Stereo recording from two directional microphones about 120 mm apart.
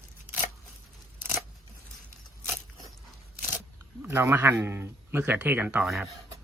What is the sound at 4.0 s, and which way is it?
Speech, 20° right (ahead or behind).